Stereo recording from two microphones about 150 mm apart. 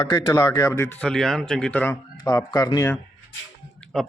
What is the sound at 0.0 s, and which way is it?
Speech, 25° left (ahead or behind).